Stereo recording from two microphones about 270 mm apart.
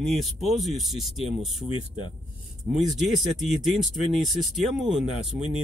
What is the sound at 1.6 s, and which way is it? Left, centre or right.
Speech, centre.